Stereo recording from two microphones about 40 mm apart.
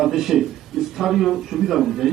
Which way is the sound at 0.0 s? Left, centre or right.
Centre.